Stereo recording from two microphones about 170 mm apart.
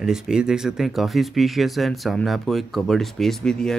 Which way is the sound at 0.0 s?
5° right (ahead or behind).